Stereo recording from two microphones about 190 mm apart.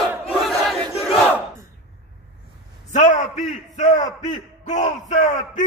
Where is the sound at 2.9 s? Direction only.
40° left (ahead or behind).